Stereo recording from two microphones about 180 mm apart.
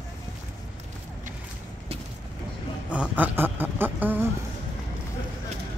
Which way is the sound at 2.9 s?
10° right (ahead or behind).